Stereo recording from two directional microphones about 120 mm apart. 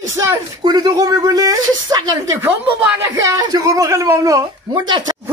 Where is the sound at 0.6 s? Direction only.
35° right (ahead or behind).